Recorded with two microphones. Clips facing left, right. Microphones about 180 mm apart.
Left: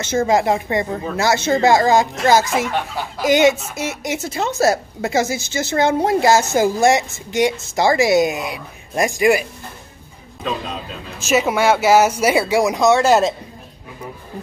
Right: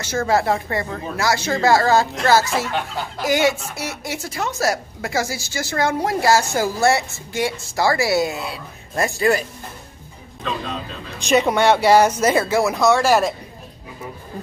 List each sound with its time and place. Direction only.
0.0 s a woman's voice: 20° left (ahead or behind)
11.1 s speech: 5° left (ahead or behind); by 13.3 s 20° left (ahead or behind)